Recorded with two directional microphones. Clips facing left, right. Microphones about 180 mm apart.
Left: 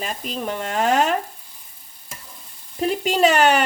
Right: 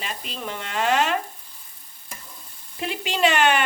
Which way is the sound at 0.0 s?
45° left (ahead or behind).